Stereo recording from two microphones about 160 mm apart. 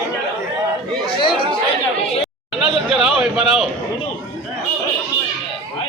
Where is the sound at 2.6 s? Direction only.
Centre (ahead or behind).